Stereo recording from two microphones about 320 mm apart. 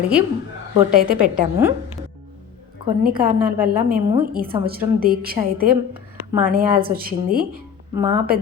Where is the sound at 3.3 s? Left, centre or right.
Right.